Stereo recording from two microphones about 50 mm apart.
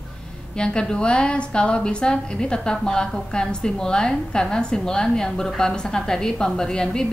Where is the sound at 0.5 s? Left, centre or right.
Centre.